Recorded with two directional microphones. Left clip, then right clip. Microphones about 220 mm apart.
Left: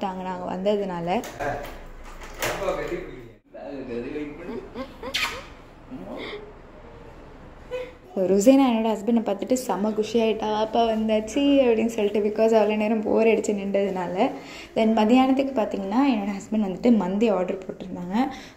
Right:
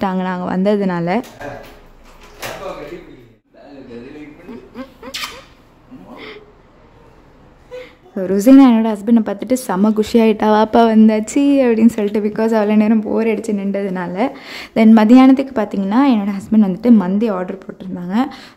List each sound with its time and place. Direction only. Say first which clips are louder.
0.0 s speech: right 9 dB; 30° right (ahead or behind)
4.7 s a sound: right 1 dB; 25° right (ahead or behind)
8.1 s speech: right 6 dB; 20° right (ahead or behind)
10.9 s a woman's voice: right 9 dB; 85° right; by 12.1 s 65° right (ahead or behind)
12.1 s speech: right 3 dB; 20° right (ahead or behind)